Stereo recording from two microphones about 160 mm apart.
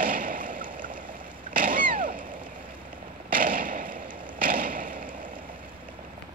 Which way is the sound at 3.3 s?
60° right (ahead or behind).